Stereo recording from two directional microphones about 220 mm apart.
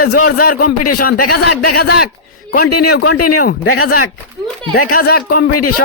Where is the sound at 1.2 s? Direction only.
90° left.